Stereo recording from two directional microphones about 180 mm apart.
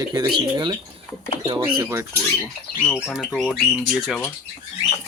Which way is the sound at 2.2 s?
5° left (ahead or behind).